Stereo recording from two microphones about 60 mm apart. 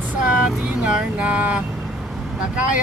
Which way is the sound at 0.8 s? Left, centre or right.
Right.